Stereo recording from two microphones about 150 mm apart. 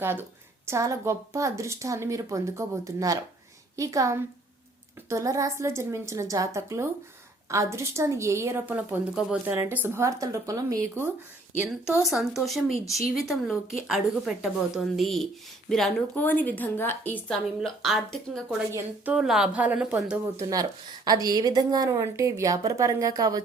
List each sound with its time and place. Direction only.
0.0 s a woman's voice: 15° right (ahead or behind)
11.7 s speech: 5° right (ahead or behind)
12.7 s speech: 20° left (ahead or behind)
13.0 s a woman's voice: centre (ahead or behind)
17.6 s speech: centre (ahead or behind)
18.7 s a woman's voice: 15° right (ahead or behind)
19.1 s a woman's voice: 5° right (ahead or behind)
20.3 s a woman's voice: 25° right (ahead or behind)